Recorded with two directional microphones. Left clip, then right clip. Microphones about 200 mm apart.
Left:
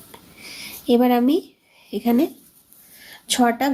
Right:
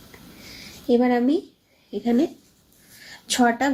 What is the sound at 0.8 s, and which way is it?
Speech, 35° left (ahead or behind).